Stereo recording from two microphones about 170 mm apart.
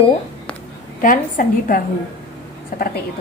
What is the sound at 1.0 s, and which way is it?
Speech, 55° left (ahead or behind).